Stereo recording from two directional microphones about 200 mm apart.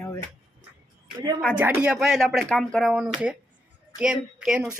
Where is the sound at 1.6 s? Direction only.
10° right (ahead or behind).